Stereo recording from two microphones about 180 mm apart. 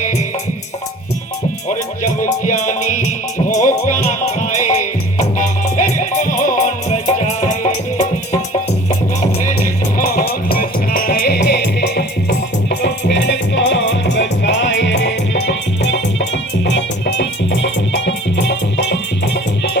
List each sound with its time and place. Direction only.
2.5 s music: 45° left (ahead or behind)
10.0 s music: 55° left (ahead or behind)
12.8 s music: 80° left